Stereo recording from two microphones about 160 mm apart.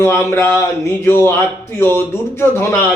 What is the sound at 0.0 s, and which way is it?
A man's voice, 15° left (ahead or behind).